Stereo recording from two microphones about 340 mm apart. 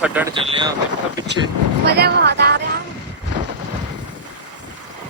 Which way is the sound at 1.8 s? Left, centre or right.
Right.